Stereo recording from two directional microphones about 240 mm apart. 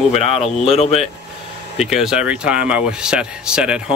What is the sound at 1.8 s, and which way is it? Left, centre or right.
Speech, centre.